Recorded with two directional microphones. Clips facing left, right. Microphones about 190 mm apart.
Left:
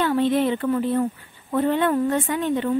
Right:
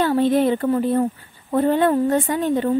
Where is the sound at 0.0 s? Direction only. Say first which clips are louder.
Right 3 dB; 40° right (ahead or behind).